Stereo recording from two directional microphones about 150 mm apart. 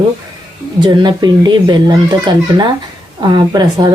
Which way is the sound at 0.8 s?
30° right (ahead or behind).